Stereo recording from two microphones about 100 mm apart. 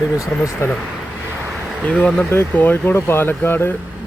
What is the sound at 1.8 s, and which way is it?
Speech, 10° left (ahead or behind).